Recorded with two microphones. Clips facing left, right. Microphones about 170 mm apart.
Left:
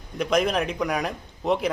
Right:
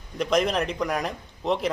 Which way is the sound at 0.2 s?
Centre (ahead or behind).